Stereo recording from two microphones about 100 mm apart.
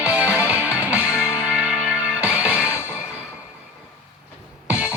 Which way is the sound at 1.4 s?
15° right (ahead or behind).